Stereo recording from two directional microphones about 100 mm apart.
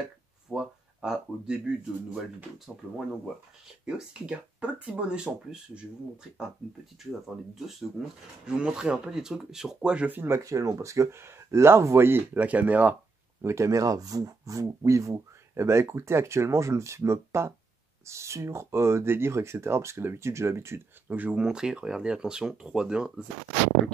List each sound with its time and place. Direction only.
0.5 s speech: 5° right (ahead or behind)
7.0 s speech: centre (ahead or behind)
13.4 s speech: 30° right (ahead or behind)
21.1 s speech: 15° right (ahead or behind)